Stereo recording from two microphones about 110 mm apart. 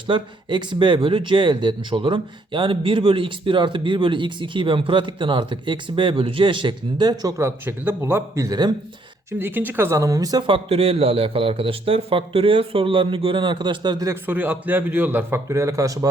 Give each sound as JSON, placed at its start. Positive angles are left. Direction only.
{"t": 0.1, "sound": "speech", "side_deg": -45}
{"t": 8.4, "sound": "speech", "side_deg": -40}
{"t": 9.4, "sound": "a man's voice", "side_deg": -20}
{"t": 10.4, "sound": "a man's voice", "side_deg": -55}
{"t": 14.1, "sound": "a man's voice", "side_deg": -20}